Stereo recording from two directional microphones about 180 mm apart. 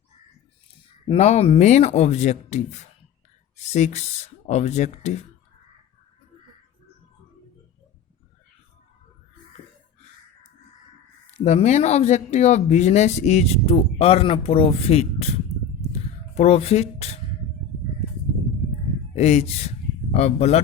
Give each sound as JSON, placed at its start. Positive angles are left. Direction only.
{"t": 1.0, "sound": "speech", "side_deg": 35}
{"t": 11.4, "sound": "speech", "side_deg": 40}
{"t": 15.9, "sound": "a sound", "side_deg": 35}
{"t": 19.1, "sound": "speech", "side_deg": 35}